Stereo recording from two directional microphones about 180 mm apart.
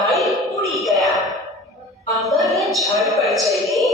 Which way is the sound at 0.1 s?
Centre (ahead or behind).